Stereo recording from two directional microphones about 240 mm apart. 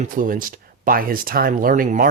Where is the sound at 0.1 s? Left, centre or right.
Right.